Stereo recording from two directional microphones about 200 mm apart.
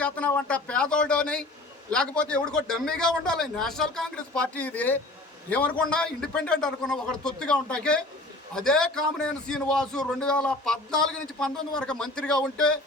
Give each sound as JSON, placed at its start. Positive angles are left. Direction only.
{"t": 0.0, "sound": "a man's voice", "side_deg": 5}